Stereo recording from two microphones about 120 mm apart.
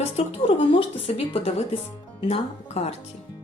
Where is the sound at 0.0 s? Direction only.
60° left (ahead or behind).